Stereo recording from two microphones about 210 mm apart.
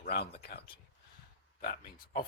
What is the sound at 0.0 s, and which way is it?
Speech, 50° left (ahead or behind).